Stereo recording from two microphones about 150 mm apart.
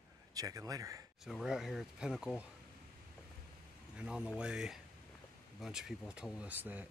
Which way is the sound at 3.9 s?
5° right (ahead or behind).